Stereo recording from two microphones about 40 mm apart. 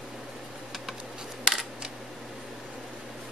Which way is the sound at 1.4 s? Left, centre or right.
Centre.